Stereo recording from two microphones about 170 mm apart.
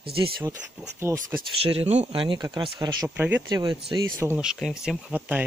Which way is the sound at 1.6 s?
35° right (ahead or behind).